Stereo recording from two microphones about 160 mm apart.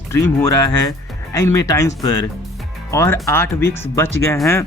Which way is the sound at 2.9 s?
20° left (ahead or behind).